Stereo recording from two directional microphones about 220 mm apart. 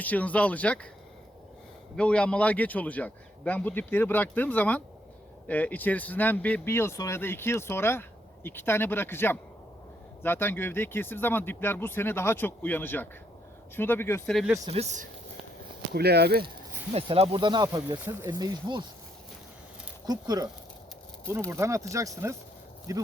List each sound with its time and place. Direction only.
0.0 s speech: 5° left (ahead or behind)
2.0 s speech: 5° left (ahead or behind)
14.3 s speech: centre (ahead or behind)
14.6 s speech: 30° right (ahead or behind)
16.0 s speech: 45° right (ahead or behind)
16.9 s speech: 25° right (ahead or behind)
20.1 s speech: 15° right (ahead or behind)
21.5 s speech: 15° right (ahead or behind)